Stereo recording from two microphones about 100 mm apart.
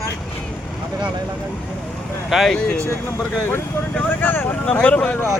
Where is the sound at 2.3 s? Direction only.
Centre (ahead or behind).